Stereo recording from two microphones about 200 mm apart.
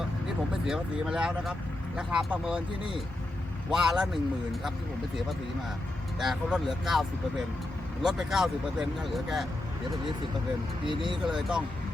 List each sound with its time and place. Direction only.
0.7 s speech: 5° right (ahead or behind)
3.7 s speech: centre (ahead or behind)
6.1 s speech: centre (ahead or behind)
8.0 s speech: centre (ahead or behind)
10.8 s speech: 25° right (ahead or behind)
11.3 s speech: centre (ahead or behind)